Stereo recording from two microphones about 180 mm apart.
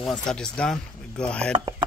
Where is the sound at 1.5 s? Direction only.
25° right (ahead or behind).